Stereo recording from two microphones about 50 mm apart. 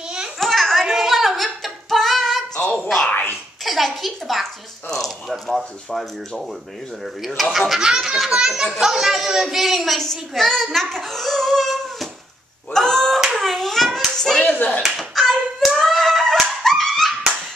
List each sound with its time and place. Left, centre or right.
0.4 s a sound: centre
2.8 s music: centre
3.6 s speech: centre
5.9 s speech: centre
7.5 s a child's voice: centre
12.7 s a sound: centre
13.2 s hands: centre
14.1 s clapping: centre
14.5 s speech: left
15.0 s hands: centre
16.6 s dog: centre